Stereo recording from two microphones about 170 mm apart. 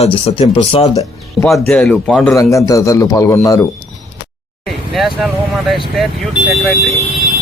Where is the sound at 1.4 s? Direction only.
5° left (ahead or behind).